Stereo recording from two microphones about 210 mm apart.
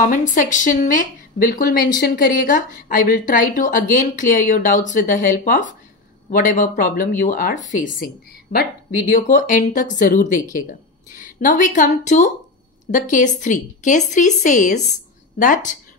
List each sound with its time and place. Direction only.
0.0 s speech: 40° left (ahead or behind)